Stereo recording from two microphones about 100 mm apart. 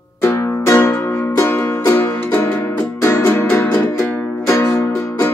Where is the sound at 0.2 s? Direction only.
30° left (ahead or behind).